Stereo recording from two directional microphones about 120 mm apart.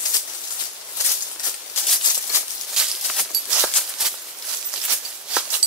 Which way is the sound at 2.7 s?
5° right (ahead or behind).